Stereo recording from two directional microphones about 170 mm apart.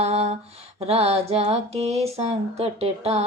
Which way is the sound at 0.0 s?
40° right (ahead or behind).